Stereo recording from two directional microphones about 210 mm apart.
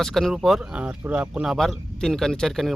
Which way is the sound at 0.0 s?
Centre (ahead or behind).